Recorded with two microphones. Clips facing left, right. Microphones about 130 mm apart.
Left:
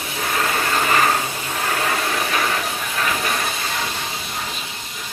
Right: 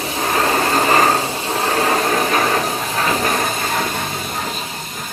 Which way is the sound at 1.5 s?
35° right (ahead or behind).